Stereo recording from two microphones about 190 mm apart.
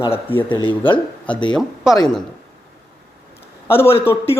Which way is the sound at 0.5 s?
25° left (ahead or behind).